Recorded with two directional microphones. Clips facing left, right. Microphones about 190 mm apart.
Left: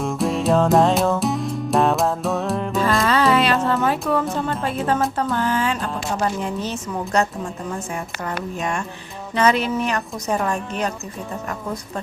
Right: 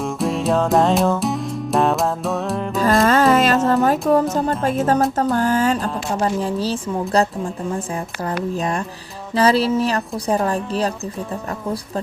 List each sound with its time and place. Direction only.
0.0 s music: centre (ahead or behind)
2.8 s music: 45° right (ahead or behind)
4.1 s a woman's voice: 40° right (ahead or behind)
4.6 s music: 45° right (ahead or behind)
5.3 s a woman's voice: 40° right (ahead or behind)
6.1 s a woman's voice: 30° right (ahead or behind)